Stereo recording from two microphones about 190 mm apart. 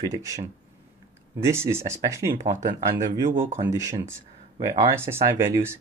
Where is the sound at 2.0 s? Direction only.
15° right (ahead or behind).